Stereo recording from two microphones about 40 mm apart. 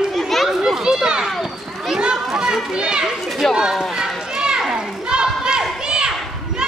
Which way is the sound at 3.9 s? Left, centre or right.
Centre.